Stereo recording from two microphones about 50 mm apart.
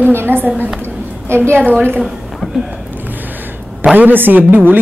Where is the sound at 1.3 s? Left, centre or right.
Right.